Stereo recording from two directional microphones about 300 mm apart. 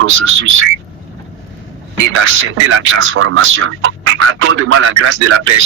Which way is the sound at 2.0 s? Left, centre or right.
Right.